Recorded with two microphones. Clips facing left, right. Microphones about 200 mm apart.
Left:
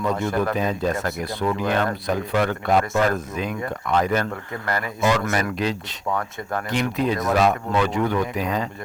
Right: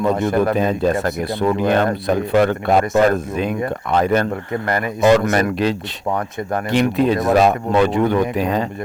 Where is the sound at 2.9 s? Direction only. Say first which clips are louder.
Right 6 dB; 35° right (ahead or behind); by 5.0 s 20° right (ahead or behind).